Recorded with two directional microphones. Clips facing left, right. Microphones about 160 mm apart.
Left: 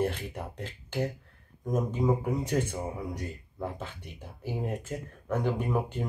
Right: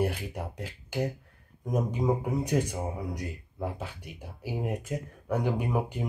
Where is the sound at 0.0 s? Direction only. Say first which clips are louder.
Even; 10° right (ahead or behind).